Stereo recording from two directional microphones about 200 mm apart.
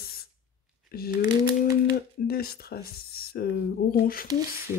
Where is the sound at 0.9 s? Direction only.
50° left (ahead or behind).